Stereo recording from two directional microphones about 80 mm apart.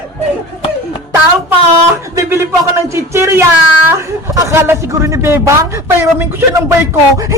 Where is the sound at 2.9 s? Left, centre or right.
Right.